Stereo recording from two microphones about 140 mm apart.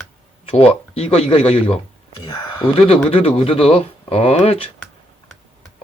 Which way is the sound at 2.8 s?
40° left (ahead or behind).